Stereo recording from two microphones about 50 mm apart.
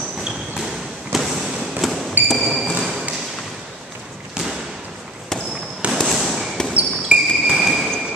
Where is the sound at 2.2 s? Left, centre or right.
Centre.